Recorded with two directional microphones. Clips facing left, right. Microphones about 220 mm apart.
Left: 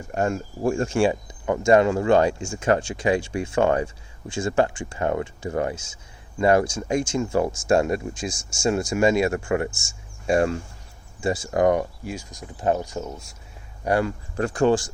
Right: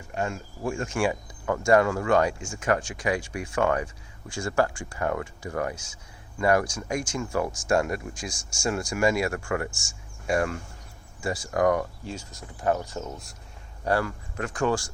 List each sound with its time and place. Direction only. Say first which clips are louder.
0.1 s speech: left 6 dB; 45° left (ahead or behind); by 14.1 s 15° left (ahead or behind)
14.3 s speech: left 6 dB; 30° left (ahead or behind)